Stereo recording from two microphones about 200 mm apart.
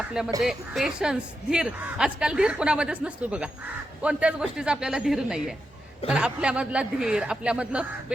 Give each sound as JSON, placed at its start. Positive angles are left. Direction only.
{"t": 0.4, "sound": "a woman's voice", "side_deg": 0}